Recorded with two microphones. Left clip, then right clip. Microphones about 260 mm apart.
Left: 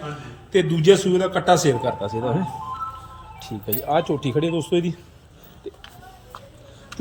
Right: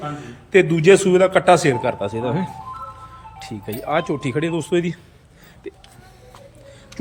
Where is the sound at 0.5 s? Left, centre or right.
Centre.